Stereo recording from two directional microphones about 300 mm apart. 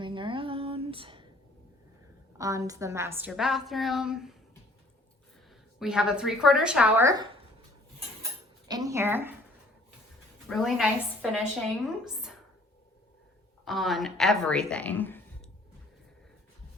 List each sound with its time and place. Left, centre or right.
0.0 s a sound: centre
2.4 s a woman's voice: centre
5.8 s a woman's voice: centre
8.6 s a sound: centre
10.5 s a woman's voice: centre
13.7 s a woman's voice: centre